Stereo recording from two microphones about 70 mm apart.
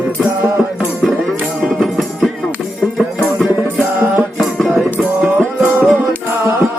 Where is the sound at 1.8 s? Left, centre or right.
Centre.